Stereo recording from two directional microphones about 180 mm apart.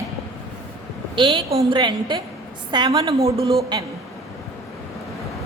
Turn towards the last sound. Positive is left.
turn(degrees=-25)  # may be behind; listen again after turning